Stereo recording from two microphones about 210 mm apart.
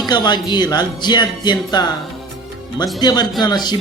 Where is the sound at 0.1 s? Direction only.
20° left (ahead or behind).